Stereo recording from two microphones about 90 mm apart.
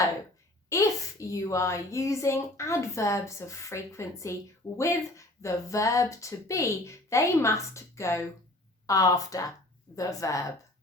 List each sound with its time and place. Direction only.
0.7 s a child's voice: 35° left (ahead or behind)